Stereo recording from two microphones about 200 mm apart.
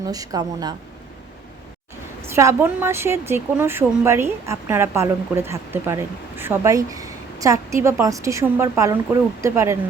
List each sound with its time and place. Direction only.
0.1 s speech: 20° right (ahead or behind)
2.3 s speech: 15° right (ahead or behind)